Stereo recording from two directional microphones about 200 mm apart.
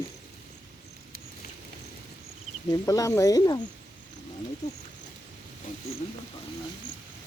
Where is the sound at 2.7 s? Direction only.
15° left (ahead or behind).